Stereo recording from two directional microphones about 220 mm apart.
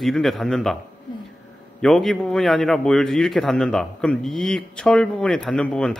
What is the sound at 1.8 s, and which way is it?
A man's voice, centre (ahead or behind).